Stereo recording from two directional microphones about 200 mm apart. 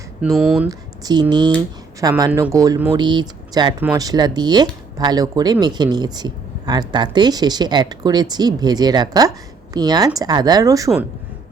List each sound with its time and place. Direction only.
0.2 s speech: 5° right (ahead or behind)
0.7 s speech: 20° right (ahead or behind)